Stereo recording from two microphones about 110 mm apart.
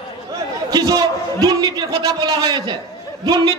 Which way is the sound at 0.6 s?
35° right (ahead or behind).